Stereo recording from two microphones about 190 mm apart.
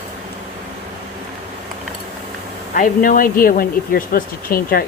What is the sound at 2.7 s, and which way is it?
Speech, 45° left (ahead or behind).